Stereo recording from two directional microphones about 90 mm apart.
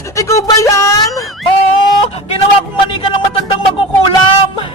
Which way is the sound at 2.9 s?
70° left (ahead or behind).